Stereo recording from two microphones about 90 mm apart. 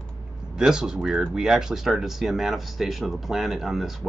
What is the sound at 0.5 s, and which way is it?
Speech, 5° right (ahead or behind).